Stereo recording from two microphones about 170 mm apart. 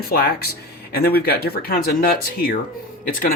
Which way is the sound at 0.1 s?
65° left (ahead or behind).